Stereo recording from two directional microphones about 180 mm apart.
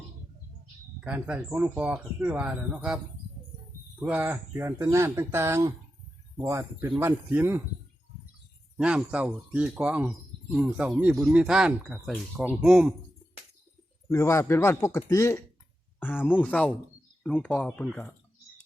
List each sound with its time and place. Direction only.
1.0 s speech: 5° right (ahead or behind)
4.0 s speech: 10° right (ahead or behind)
8.8 s speech: 5° right (ahead or behind)
14.1 s a man's voice: 15° left (ahead or behind)